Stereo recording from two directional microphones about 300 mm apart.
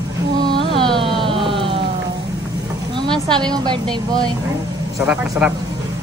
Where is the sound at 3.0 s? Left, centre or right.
Centre.